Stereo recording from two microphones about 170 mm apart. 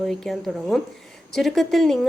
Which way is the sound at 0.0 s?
Centre (ahead or behind).